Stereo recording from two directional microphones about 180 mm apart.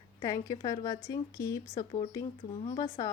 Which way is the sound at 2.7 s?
30° left (ahead or behind).